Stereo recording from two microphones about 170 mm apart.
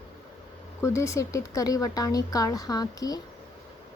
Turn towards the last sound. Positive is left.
turn(degrees=20)  # may be behind; listen again after turning